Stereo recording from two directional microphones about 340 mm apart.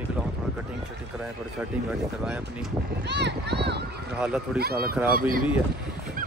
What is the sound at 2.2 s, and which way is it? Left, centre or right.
Speech, centre.